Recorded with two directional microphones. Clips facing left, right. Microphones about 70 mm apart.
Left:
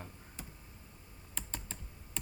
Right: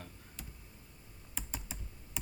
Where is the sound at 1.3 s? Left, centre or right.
Centre.